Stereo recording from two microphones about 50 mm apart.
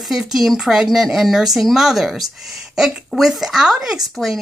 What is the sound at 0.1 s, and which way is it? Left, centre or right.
Speech, centre.